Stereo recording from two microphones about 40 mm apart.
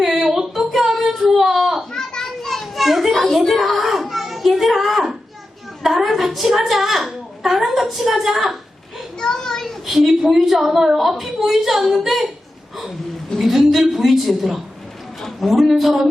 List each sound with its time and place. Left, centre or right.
0.0 s child singing: centre
1.9 s children playing: centre
2.2 s children playing: centre
3.3 s a sound: centre
5.8 s a woman's voice: centre
9.2 s a sound: centre
9.8 s a woman's voice: centre
13.4 s a woman's voice: centre